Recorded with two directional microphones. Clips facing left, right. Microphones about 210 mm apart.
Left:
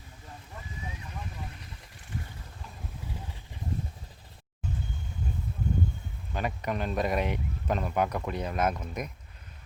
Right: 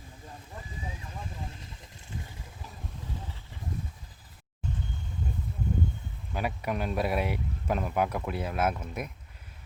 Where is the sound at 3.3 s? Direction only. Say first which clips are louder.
Left 2 dB; 15° left (ahead or behind).